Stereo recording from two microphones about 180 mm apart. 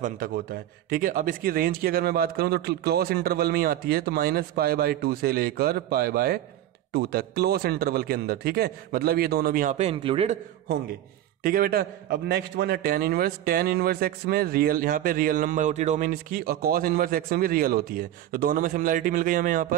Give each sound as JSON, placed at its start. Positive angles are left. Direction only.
{"t": 0.0, "sound": "a man's voice", "side_deg": -55}
{"t": 11.4, "sound": "a man's voice", "side_deg": -55}